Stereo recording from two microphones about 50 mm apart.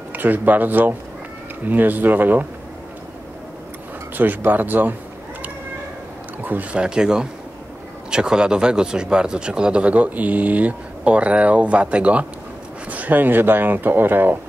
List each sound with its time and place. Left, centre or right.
0.1 s speech: right
4.5 s speech: right
6.4 s speech: right
6.8 s speech: centre; by 14.4 s right